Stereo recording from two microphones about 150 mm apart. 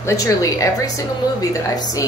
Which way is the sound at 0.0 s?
20° left (ahead or behind).